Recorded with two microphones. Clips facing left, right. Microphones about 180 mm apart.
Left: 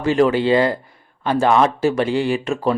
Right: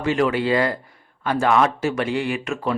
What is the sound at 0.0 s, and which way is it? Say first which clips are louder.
Speech: left 4 dB; 35° left (ahead or behind).